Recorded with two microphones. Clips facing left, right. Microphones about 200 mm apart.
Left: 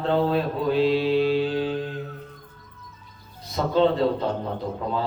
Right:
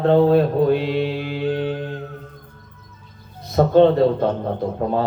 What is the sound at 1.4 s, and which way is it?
Music, 55° right (ahead or behind).